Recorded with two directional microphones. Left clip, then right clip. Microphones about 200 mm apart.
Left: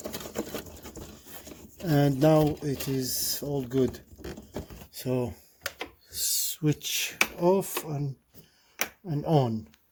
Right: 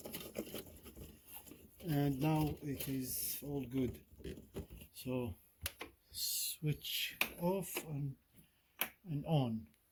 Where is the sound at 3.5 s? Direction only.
55° left (ahead or behind).